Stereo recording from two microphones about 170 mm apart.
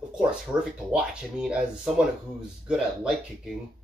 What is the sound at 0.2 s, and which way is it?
Speech, 5° right (ahead or behind).